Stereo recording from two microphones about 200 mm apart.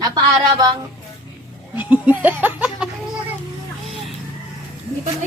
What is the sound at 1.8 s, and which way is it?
Laughter, 10° right (ahead or behind).